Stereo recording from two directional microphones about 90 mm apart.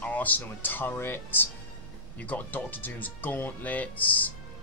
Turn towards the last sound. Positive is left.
turn(degrees=20)  # may be behind; listen again after turning